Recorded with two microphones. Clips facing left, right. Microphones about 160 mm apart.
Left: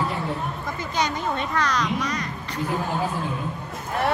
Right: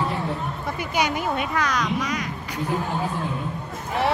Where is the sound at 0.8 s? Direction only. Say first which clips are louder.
Right 2 dB; 10° right (ahead or behind).